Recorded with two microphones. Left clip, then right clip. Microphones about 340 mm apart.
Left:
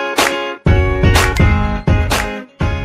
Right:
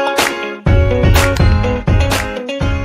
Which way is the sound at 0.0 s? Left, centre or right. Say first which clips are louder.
Even; centre.